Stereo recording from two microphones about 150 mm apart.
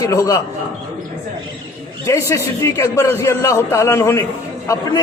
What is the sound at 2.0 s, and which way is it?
A man's voice, 20° left (ahead or behind).